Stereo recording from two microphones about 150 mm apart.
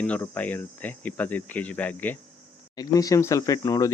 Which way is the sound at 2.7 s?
25° left (ahead or behind).